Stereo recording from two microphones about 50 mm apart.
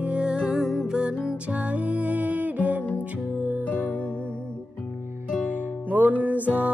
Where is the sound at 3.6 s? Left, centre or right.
Left.